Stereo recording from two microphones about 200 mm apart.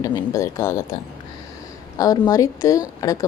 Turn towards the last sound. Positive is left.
turn(degrees=15)  # may be behind; listen again after turning